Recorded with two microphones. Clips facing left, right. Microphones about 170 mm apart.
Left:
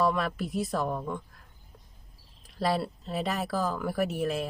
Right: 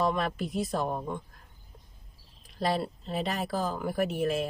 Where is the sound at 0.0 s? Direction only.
20° right (ahead or behind).